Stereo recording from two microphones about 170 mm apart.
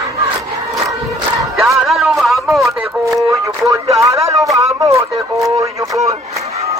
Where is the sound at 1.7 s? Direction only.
Centre (ahead or behind).